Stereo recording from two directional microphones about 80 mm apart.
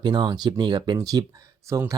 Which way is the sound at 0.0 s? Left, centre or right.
Right.